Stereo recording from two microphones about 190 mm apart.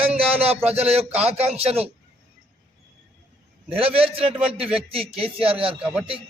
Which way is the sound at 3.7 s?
30° right (ahead or behind).